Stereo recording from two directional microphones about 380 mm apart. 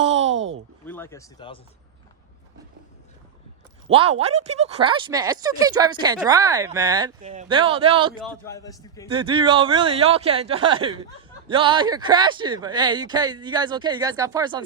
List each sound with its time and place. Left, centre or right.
0.0 s a sound: centre
0.3 s a sound: right
0.9 s speech: centre
3.8 s speech: centre
8.2 s a man's voice: centre
9.1 s speech: centre